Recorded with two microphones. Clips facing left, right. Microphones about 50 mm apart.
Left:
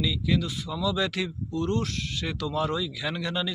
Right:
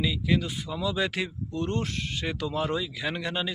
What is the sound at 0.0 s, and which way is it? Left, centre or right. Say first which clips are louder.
Speech: even; centre.